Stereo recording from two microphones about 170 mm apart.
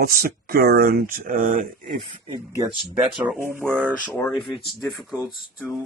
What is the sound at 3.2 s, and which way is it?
Speech, 15° right (ahead or behind).